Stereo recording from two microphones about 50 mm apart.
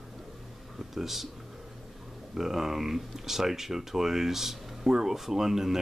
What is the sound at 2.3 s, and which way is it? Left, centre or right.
Speech, centre.